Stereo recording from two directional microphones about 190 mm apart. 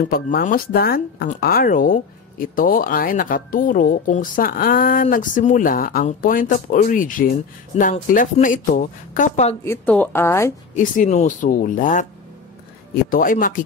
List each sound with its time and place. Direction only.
0.0 s speech: 50° left (ahead or behind)
9.7 s a woman's voice: 10° left (ahead or behind)
10.7 s speech: 40° left (ahead or behind)
13.1 s speech: 45° left (ahead or behind)